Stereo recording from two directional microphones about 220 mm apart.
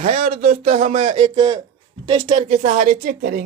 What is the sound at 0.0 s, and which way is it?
Speech, 30° right (ahead or behind).